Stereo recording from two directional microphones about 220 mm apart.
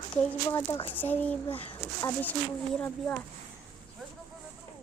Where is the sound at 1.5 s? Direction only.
25° left (ahead or behind).